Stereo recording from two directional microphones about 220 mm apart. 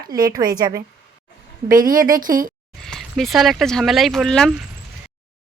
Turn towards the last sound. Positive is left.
turn(degrees=0)  # may be behind; listen again after turning